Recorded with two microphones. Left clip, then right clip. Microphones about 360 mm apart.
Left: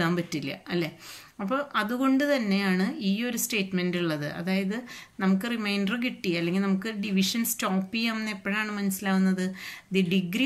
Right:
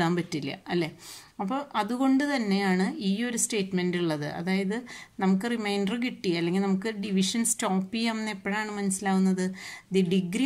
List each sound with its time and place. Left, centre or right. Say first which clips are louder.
0.0 s speech: even; centre